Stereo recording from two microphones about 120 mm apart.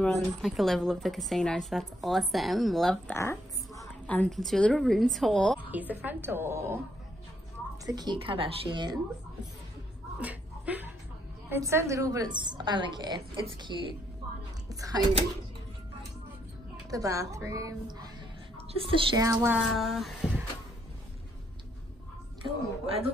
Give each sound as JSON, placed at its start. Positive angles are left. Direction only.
{"t": 0.0, "sound": "speech", "side_deg": 0}
{"t": 3.1, "sound": "a sound", "side_deg": 20}
{"t": 4.3, "sound": "speech", "side_deg": 5}
{"t": 5.6, "sound": "a woman's voice", "side_deg": -15}
{"t": 7.8, "sound": "a woman's voice", "side_deg": -35}
{"t": 10.2, "sound": "a sound", "side_deg": -15}
{"t": 11.4, "sound": "a woman's voice", "side_deg": -20}
{"t": 14.7, "sound": "a woman's voice", "side_deg": -30}
{"t": 16.9, "sound": "a woman's voice", "side_deg": -25}
{"t": 18.8, "sound": "a woman's voice", "side_deg": -45}
{"t": 19.1, "sound": "a woman's voice", "side_deg": -25}
{"t": 19.5, "sound": "speech", "side_deg": -5}
{"t": 22.4, "sound": "a woman's voice", "side_deg": -55}